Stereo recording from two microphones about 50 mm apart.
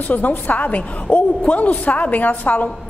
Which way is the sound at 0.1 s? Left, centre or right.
Left.